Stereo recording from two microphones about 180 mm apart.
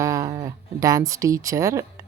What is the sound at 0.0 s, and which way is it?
Speech, 20° right (ahead or behind).